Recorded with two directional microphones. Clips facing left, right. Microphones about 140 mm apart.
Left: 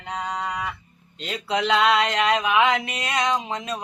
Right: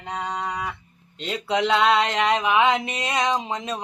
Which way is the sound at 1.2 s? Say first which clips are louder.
Right 1 dB; 25° right (ahead or behind).